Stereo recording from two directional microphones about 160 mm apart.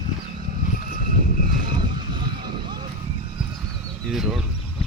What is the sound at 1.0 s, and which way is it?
Vehicle, 60° right (ahead or behind).